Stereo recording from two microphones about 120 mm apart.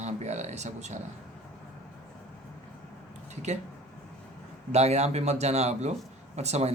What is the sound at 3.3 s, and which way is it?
Speech, 70° right (ahead or behind).